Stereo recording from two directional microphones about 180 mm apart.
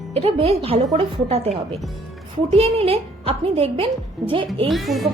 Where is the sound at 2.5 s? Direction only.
30° right (ahead or behind).